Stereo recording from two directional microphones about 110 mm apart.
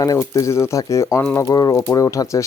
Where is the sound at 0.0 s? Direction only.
30° left (ahead or behind).